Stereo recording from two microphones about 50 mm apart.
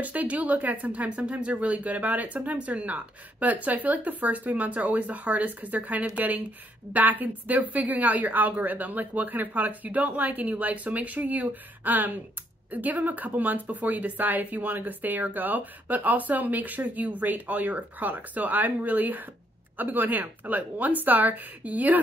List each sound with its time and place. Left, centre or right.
0.0 s a woman's voice: right